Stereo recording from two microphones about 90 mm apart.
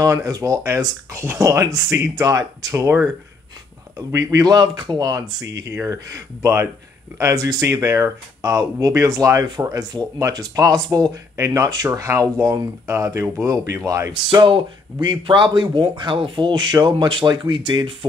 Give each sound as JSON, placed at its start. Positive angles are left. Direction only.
{"t": 0.0, "sound": "speech", "side_deg": -40}
{"t": 4.1, "sound": "speech", "side_deg": -40}
{"t": 14.4, "sound": "speech", "side_deg": -60}